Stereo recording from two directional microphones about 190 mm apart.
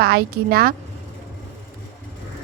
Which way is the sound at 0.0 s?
55° right (ahead or behind).